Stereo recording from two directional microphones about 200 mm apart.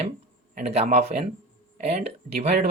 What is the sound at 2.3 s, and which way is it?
Speech, 30° right (ahead or behind).